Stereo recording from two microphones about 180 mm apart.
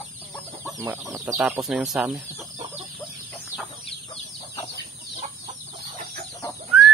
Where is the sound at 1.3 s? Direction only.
10° right (ahead or behind).